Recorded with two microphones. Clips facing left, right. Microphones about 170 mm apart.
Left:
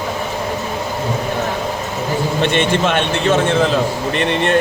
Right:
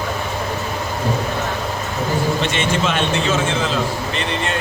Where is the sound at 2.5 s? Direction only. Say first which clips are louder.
Left 4 dB; 55° left (ahead or behind).